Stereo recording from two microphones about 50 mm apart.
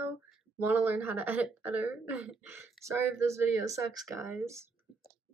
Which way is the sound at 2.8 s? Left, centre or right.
Right.